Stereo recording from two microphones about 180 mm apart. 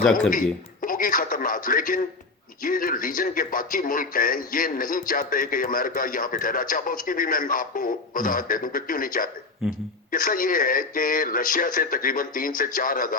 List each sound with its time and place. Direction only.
0.0 s speech: 5° left (ahead or behind)
0.3 s radio: 50° left (ahead or behind)
2.6 s speech: 50° left (ahead or behind)